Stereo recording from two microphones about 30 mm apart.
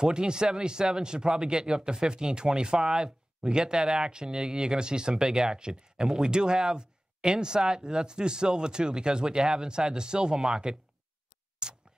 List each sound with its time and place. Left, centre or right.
0.0 s speech: right
11.6 s tick: right